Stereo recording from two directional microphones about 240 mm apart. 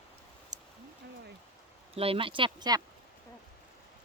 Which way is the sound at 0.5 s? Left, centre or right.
Right.